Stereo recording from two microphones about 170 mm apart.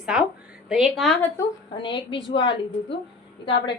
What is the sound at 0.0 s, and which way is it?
A woman's voice, 5° right (ahead or behind).